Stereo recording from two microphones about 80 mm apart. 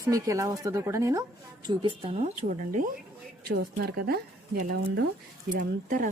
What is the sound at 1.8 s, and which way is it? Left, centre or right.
Speech, right.